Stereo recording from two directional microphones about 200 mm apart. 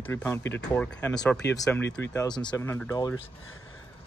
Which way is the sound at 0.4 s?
65° left (ahead or behind).